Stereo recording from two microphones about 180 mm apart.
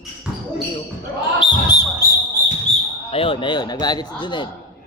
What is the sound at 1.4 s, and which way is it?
Basketball bounce, 25° left (ahead or behind).